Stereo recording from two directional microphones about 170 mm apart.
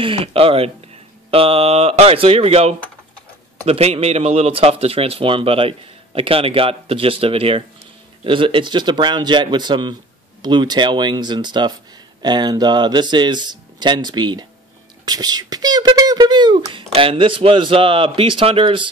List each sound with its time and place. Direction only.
0.0 s a man's voice: 35° right (ahead or behind)